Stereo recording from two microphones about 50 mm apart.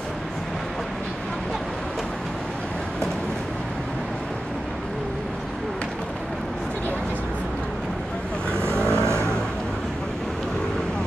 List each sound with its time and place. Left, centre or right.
8.5 s vehicle: right